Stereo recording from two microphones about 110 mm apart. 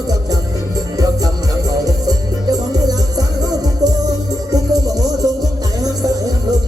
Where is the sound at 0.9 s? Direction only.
35° right (ahead or behind).